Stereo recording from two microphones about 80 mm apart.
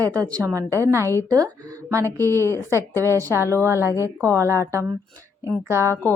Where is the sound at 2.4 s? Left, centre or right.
Left.